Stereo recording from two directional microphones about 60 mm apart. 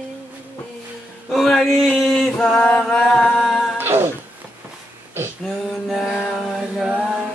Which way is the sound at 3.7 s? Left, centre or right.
Right.